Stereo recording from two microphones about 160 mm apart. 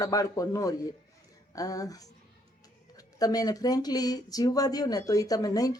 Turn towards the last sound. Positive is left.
turn(degrees=20)  # may be behind; listen again after turning